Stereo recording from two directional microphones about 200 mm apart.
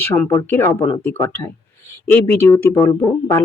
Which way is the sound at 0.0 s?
10° left (ahead or behind).